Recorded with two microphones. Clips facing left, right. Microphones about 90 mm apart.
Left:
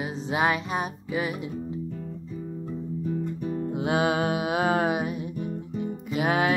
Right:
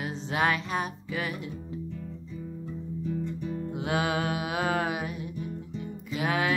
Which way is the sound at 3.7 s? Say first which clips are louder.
Left 4 dB; 20° left (ahead or behind).